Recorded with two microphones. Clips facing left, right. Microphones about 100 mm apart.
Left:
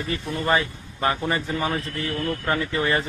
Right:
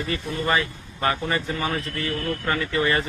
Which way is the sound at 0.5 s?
20° left (ahead or behind).